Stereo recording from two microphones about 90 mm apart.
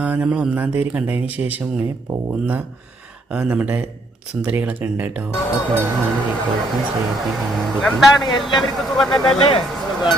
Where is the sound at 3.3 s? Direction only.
10° right (ahead or behind).